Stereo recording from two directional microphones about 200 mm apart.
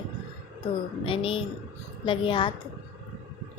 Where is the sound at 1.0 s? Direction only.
25° left (ahead or behind).